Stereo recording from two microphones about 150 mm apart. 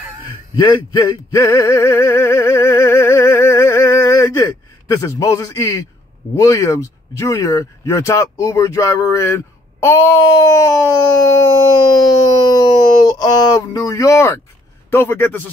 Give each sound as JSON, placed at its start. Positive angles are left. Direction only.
{"t": 0.6, "sound": "male singing", "side_deg": 25}
{"t": 6.3, "sound": "a man's voice", "side_deg": 20}